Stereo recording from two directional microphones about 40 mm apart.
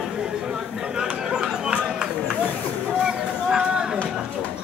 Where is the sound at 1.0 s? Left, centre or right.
Centre.